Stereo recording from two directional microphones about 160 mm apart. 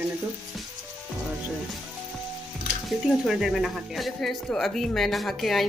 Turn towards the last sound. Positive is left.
turn(degrees=0)  # may be behind; listen again after turning